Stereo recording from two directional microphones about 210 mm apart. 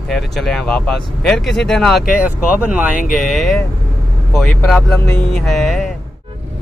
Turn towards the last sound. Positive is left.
turn(degrees=0)  # may be behind; listen again after turning